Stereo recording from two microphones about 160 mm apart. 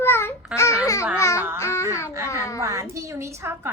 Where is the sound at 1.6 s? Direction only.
15° left (ahead or behind).